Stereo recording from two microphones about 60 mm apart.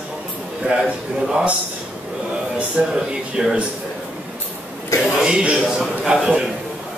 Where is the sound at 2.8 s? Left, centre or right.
Centre.